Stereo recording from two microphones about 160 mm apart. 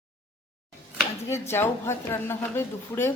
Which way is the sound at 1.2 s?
15° left (ahead or behind).